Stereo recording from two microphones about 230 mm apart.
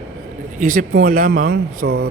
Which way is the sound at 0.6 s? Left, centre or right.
Right.